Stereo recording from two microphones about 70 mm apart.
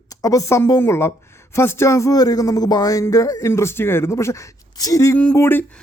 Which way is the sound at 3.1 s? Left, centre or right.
Left.